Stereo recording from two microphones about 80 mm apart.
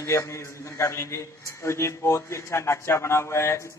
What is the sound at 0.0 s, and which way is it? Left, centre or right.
A man's voice, left.